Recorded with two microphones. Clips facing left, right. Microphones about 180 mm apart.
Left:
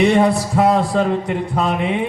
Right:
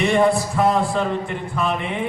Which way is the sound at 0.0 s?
70° left (ahead or behind).